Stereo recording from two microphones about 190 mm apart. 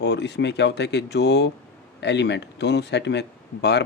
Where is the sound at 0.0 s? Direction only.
65° left (ahead or behind).